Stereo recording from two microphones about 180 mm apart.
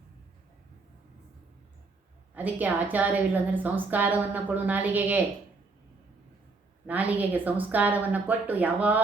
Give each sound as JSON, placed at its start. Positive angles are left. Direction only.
{"t": 2.3, "sound": "a woman's voice", "side_deg": -10}
{"t": 6.8, "sound": "a woman's voice", "side_deg": -10}